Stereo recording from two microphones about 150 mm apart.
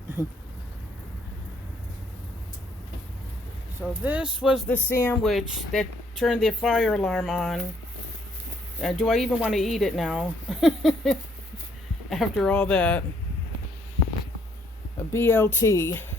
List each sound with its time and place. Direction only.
4.0 s speech: 10° right (ahead or behind)
4.7 s speech: 15° left (ahead or behind)
5.2 s speech: centre (ahead or behind)
8.8 s speech: centre (ahead or behind)
15.1 s speech: 15° left (ahead or behind)